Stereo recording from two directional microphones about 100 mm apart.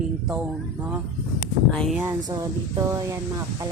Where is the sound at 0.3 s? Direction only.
15° right (ahead or behind).